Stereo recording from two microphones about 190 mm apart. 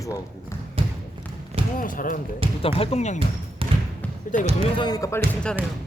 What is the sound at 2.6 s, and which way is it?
Speech, 30° left (ahead or behind).